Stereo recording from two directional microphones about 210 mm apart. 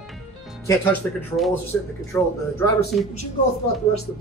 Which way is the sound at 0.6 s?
10° left (ahead or behind).